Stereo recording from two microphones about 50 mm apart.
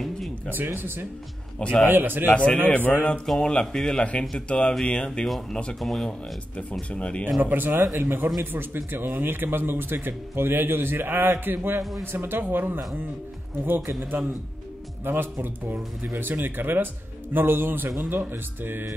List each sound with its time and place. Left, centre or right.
0.7 s a man's voice: right
2.3 s speech: left
2.7 s speech: left
3.3 s speech: centre
5.2 s speech: centre
6.5 s speech: left
7.4 s a man's voice: right